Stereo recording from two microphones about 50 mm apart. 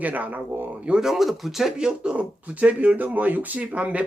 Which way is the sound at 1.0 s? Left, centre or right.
Centre.